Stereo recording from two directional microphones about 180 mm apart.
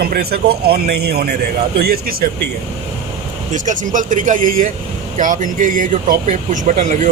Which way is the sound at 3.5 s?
45° right (ahead or behind).